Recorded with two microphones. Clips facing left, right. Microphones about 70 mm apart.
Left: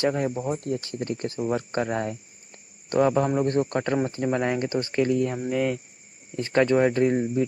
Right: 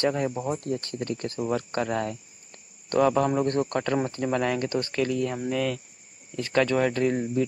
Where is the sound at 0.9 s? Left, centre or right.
Centre.